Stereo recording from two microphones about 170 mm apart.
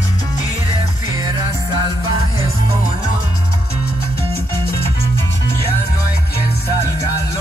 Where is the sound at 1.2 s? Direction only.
20° right (ahead or behind).